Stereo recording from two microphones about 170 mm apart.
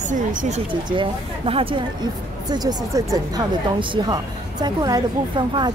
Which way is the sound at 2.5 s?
20° right (ahead or behind).